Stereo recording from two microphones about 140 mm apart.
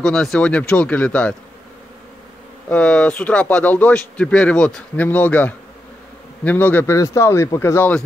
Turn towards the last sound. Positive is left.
turn(degrees=15)  # may be behind; listen again after turning